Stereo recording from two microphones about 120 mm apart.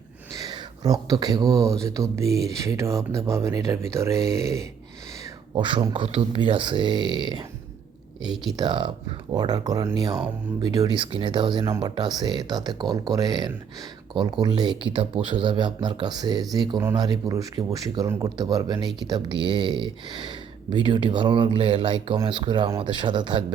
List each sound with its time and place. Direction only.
0.3 s speech: 35° right (ahead or behind)
5.5 s speech: 45° right (ahead or behind)
8.2 s speech: 5° right (ahead or behind)
8.5 s speech: 40° right (ahead or behind)